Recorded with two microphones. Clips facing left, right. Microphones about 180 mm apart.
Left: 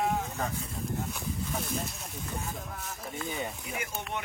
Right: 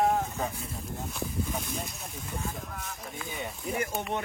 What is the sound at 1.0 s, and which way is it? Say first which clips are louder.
Speech: right 2 dB; centre (ahead or behind).